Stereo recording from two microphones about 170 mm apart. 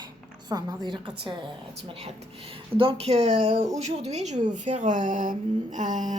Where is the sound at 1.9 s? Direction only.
40° right (ahead or behind).